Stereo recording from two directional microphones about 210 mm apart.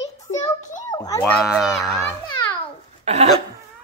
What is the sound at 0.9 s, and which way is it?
Speech, 15° left (ahead or behind).